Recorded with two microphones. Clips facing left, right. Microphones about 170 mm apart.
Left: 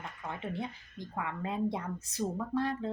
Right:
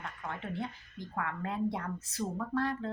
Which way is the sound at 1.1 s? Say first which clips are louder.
Even; 15° left (ahead or behind).